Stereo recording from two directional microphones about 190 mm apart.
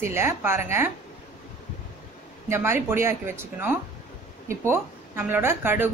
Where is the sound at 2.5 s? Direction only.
15° right (ahead or behind).